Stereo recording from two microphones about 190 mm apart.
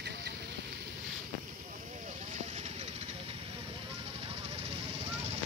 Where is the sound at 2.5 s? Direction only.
35° right (ahead or behind).